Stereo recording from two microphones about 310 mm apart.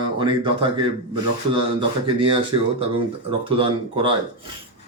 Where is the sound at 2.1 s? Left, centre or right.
Centre.